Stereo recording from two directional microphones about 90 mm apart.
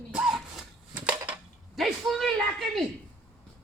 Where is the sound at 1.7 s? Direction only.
Centre (ahead or behind).